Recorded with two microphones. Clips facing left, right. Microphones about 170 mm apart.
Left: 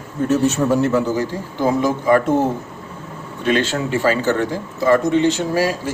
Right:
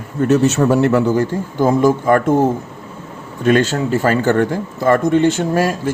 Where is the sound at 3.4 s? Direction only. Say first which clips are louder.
Right 4 dB; 45° right (ahead or behind).